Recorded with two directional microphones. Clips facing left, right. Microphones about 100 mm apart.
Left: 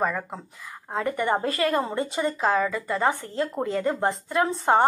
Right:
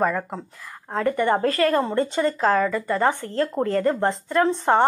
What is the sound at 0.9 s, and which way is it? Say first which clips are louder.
A woman's voice: right 4 dB; 15° left (ahead or behind).